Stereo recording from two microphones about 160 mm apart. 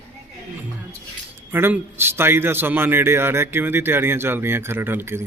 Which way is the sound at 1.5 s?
15° right (ahead or behind).